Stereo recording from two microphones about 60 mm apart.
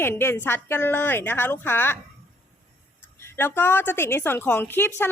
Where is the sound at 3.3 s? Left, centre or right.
Left.